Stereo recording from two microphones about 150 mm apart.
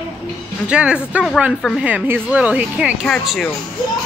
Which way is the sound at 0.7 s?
5° right (ahead or behind).